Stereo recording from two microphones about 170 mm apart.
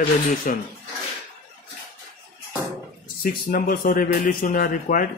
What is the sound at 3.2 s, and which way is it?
A man's voice, 55° left (ahead or behind).